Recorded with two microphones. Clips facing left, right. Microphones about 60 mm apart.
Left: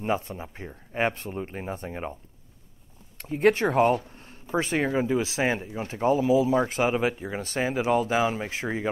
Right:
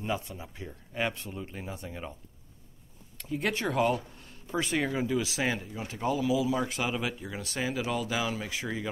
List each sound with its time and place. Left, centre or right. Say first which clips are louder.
0.0 s speech: left 6 dB; left
3.2 s speech: left 10 dB; left